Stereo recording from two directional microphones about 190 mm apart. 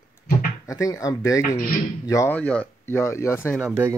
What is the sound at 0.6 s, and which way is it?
Speech, 15° left (ahead or behind).